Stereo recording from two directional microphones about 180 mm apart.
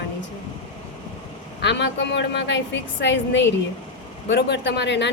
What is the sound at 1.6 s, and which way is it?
A woman's voice, 75° left (ahead or behind).